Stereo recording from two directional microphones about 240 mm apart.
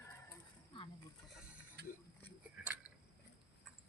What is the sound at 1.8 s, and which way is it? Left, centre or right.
Speech, right.